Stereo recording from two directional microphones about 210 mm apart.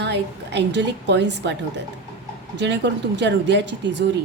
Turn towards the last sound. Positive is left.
turn(degrees=-55)  # may be behind; listen again after turning